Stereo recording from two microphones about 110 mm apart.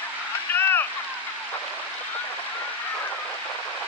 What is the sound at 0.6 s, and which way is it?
Rowboat, 20° left (ahead or behind).